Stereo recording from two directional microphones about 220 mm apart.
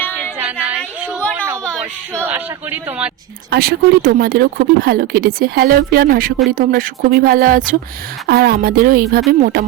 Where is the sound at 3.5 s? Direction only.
45° right (ahead or behind).